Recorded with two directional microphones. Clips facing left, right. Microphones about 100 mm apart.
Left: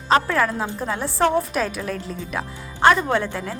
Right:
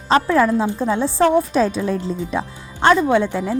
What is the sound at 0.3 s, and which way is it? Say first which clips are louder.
A woman's voice: right 6 dB; 20° right (ahead or behind).